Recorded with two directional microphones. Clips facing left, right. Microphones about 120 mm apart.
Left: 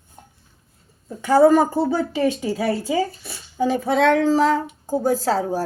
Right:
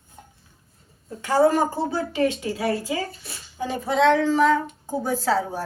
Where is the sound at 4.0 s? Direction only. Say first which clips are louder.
Even; 50° left (ahead or behind).